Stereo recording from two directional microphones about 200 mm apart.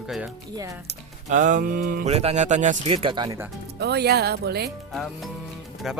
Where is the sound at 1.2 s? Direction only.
40° right (ahead or behind).